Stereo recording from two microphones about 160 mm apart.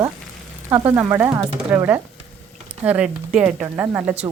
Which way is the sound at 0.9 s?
20° right (ahead or behind).